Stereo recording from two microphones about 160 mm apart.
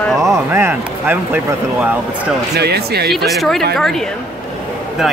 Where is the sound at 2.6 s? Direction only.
90° right.